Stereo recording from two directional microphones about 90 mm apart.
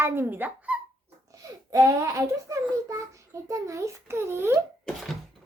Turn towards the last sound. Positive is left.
turn(degrees=-25)  # may be behind; listen again after turning